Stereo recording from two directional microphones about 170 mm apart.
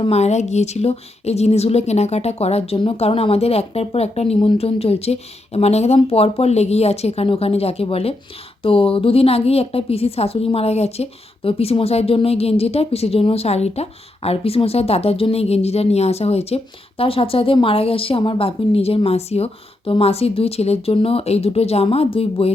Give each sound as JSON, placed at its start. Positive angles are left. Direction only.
{"t": 0.0, "sound": "speech", "side_deg": 40}